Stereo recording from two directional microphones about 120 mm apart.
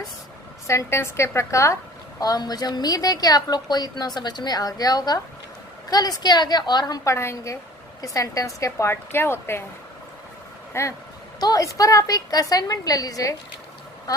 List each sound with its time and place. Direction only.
0.7 s a woman's voice: 25° left (ahead or behind)
10.7 s a woman's voice: 20° left (ahead or behind)